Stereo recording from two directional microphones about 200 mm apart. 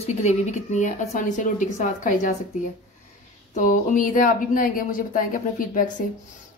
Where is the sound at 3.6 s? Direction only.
40° left (ahead or behind).